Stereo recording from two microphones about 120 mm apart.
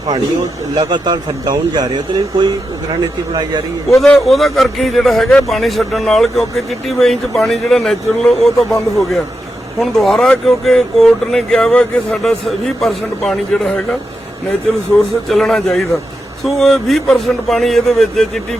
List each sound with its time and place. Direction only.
0.8 s speech: 40° right (ahead or behind)
3.8 s a man's voice: centre (ahead or behind)
15.3 s a man's voice: 5° left (ahead or behind)